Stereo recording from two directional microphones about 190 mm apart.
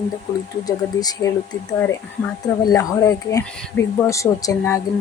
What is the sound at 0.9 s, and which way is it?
Speech, 20° left (ahead or behind).